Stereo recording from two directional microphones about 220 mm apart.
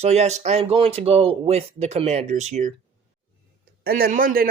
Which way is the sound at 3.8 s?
40° right (ahead or behind).